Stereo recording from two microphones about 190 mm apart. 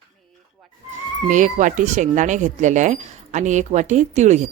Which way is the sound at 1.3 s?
40° right (ahead or behind).